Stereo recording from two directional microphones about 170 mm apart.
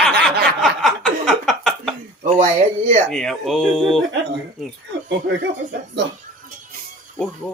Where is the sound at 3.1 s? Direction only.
Centre (ahead or behind).